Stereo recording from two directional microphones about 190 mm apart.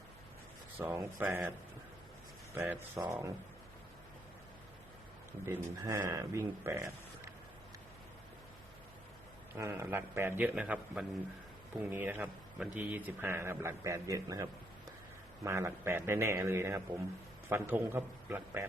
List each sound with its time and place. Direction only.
0.8 s a man's voice: 10° right (ahead or behind)
2.6 s a man's voice: 10° right (ahead or behind)
5.5 s a man's voice: 15° right (ahead or behind)
9.6 s a man's voice: 15° right (ahead or behind)